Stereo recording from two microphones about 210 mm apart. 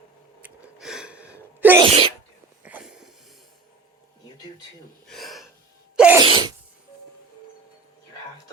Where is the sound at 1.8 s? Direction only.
25° right (ahead or behind).